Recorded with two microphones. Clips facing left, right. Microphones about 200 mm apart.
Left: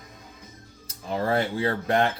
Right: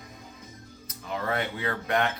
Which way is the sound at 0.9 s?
35° left (ahead or behind).